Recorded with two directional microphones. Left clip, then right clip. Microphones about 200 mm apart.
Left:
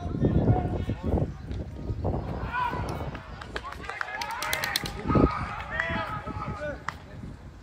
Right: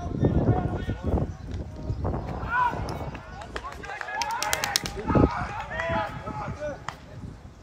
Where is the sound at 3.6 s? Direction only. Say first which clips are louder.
Left 1 dB; 45° right (ahead or behind).